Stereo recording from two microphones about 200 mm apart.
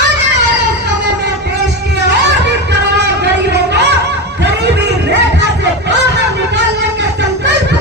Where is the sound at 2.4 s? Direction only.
60° right (ahead or behind).